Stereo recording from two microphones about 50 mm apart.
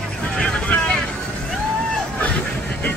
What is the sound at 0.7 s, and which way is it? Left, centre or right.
Boat, left.